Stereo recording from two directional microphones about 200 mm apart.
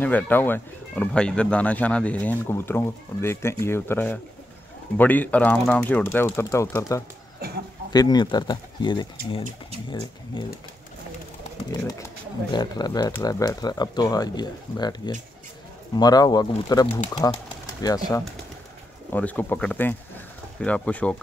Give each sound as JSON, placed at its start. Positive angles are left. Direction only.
{"t": 0.0, "sound": "speech", "side_deg": 10}
{"t": 7.3, "sound": "a sound", "side_deg": -50}
{"t": 7.9, "sound": "speech", "side_deg": 20}
{"t": 11.7, "sound": "speech", "side_deg": 15}
{"t": 19.1, "sound": "speech", "side_deg": 5}